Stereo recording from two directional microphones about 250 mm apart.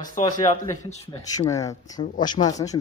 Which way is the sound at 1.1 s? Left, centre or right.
Centre.